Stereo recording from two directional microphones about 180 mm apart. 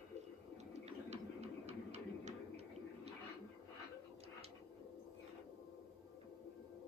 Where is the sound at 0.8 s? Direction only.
40° right (ahead or behind).